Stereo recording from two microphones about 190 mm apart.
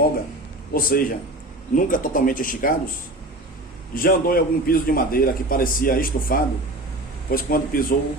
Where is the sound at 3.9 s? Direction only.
50° left (ahead or behind).